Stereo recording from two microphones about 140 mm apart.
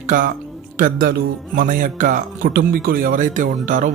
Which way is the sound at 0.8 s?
90° right.